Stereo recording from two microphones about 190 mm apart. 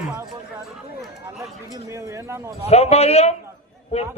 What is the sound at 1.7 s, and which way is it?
Speech, 15° right (ahead or behind).